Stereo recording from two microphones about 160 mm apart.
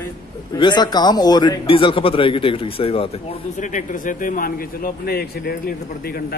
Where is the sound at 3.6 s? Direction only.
50° left (ahead or behind); by 5.7 s 75° left (ahead or behind).